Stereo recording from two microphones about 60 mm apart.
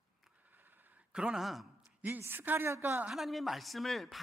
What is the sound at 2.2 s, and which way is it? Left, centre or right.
Speech, right.